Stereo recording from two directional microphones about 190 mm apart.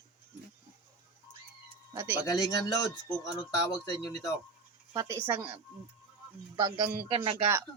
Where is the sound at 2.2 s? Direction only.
20° left (ahead or behind).